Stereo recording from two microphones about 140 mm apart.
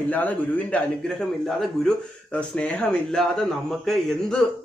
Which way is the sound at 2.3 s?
5° left (ahead or behind).